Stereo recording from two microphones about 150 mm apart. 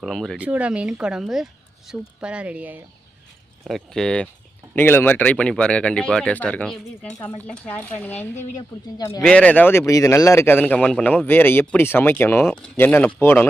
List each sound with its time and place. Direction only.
0.0 s speech: centre (ahead or behind)
0.3 s speech: 10° right (ahead or behind)
3.6 s speech: centre (ahead or behind)
9.0 s speech: 25° left (ahead or behind)
9.2 s speech: 10° left (ahead or behind)